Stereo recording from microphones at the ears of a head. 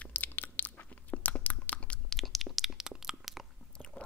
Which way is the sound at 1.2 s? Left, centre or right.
Left.